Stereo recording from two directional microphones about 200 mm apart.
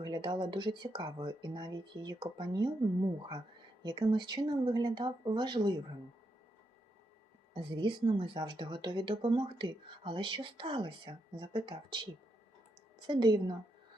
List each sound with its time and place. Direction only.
0.0 s speech: 25° right (ahead or behind)
7.6 s speech: 25° right (ahead or behind)